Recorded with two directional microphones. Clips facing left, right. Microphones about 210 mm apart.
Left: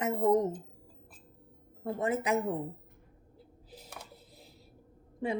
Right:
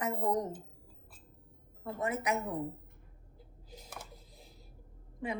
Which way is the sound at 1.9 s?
25° left (ahead or behind).